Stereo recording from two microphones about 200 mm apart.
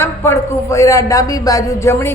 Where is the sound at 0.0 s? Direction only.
10° left (ahead or behind).